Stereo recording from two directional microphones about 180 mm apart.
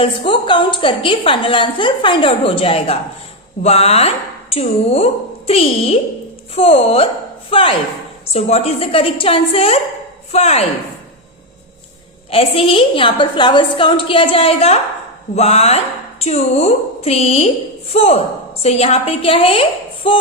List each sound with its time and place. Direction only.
0.0 s a woman's voice: 30° left (ahead or behind)
12.3 s a woman's voice: 30° left (ahead or behind)